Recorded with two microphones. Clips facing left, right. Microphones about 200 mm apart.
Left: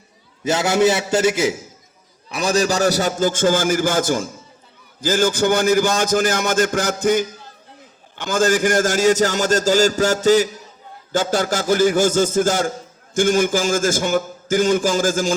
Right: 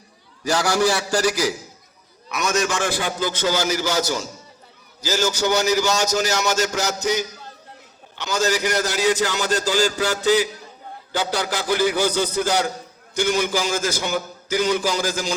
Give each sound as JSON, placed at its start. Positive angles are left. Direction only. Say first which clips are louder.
{"t": 0.4, "sound": "a man's voice", "louder": "left 3 dB", "side_deg": 20}